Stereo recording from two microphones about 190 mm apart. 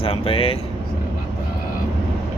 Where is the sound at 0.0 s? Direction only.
30° left (ahead or behind).